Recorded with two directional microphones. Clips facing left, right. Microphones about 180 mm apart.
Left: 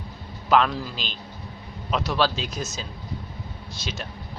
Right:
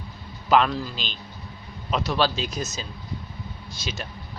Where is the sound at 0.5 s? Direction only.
Centre (ahead or behind).